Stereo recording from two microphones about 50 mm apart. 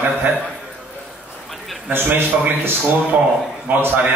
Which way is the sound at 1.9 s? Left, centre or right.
Right.